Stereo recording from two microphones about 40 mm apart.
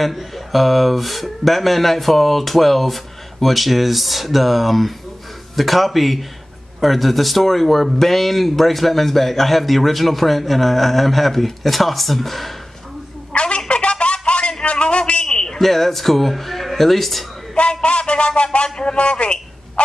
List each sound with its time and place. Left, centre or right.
0.0 s speech: centre
13.3 s a sound: left
15.6 s speech: centre
17.8 s speech: left